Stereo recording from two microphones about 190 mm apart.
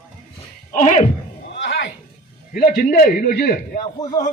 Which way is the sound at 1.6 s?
70° left (ahead or behind).